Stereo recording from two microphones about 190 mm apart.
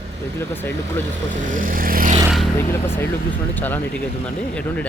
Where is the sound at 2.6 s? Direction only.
10° left (ahead or behind).